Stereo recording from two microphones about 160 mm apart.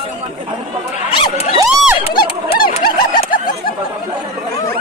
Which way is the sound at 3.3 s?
60° left (ahead or behind).